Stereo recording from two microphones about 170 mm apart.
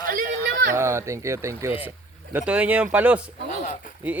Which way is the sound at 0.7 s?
15° right (ahead or behind).